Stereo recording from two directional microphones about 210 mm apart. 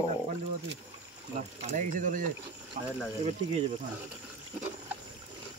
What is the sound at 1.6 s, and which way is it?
Speech, 40° right (ahead or behind).